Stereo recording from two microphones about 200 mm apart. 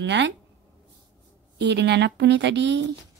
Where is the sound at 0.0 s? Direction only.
60° right (ahead or behind).